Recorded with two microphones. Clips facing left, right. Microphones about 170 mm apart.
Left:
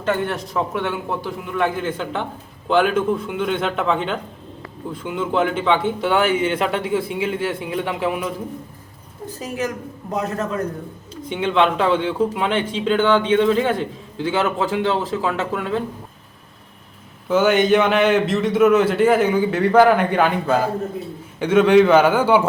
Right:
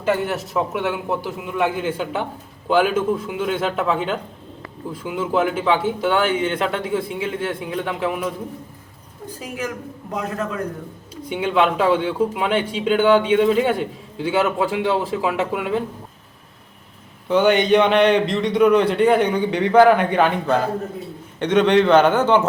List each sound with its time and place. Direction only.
0.0 s a man's voice: 5° right (ahead or behind)
10.2 s a man's voice: 40° left (ahead or behind)
11.3 s a man's voice: 5° right (ahead or behind)
17.2 s a man's voice: centre (ahead or behind)